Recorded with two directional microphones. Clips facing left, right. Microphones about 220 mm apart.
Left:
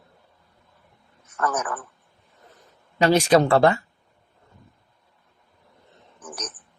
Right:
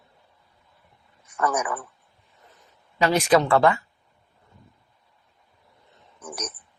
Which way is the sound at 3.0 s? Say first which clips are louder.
Left 2 dB; 30° left (ahead or behind).